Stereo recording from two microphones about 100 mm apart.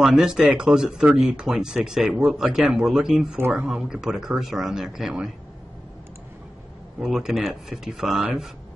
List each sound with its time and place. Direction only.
0.0 s speech: 5° right (ahead or behind)
3.3 s speech: 20° right (ahead or behind)
3.6 s speech: 5° right (ahead or behind)
7.0 s speech: 5° right (ahead or behind)